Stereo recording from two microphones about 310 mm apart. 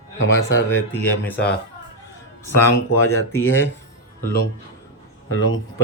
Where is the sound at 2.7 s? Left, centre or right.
Left.